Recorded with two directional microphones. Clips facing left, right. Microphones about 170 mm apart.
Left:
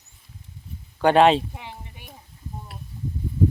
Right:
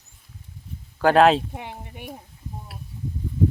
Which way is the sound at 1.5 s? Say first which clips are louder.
Right 4 dB; 55° right (ahead or behind).